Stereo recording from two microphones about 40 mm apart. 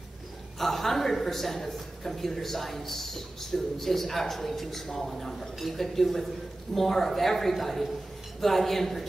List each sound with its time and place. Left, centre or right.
0.6 s a man's voice: centre